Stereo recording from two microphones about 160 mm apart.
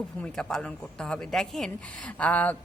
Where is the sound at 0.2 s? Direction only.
5° left (ahead or behind).